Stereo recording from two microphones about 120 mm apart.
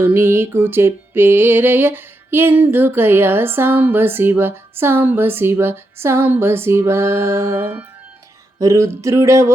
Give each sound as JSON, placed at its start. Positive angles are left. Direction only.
{"t": 0.0, "sound": "music", "side_deg": -20}